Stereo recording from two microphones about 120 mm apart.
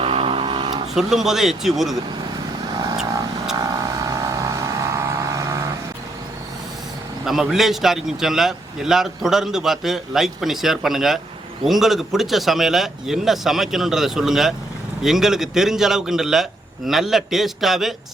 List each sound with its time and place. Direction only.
0.0 s a sound: 50° right (ahead or behind)
0.9 s a man's voice: 5° right (ahead or behind)
3.5 s vehicle: 30° right (ahead or behind)
7.3 s a man's voice: centre (ahead or behind)